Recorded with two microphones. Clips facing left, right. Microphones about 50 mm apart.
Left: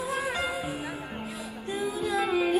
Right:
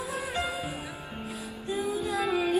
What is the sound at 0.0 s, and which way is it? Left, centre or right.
Music, left.